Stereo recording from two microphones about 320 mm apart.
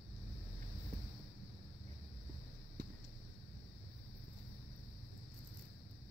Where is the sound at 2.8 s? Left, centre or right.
Right.